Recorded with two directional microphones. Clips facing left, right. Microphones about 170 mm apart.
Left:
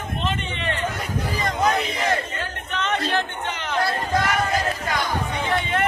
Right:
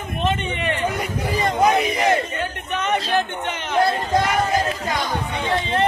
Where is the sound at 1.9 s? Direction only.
20° right (ahead or behind).